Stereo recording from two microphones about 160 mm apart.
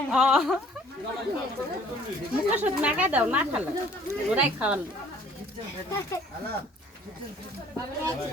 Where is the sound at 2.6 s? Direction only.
10° right (ahead or behind).